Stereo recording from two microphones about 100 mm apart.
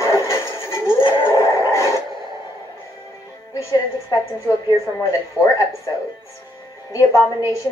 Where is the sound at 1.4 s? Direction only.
30° left (ahead or behind).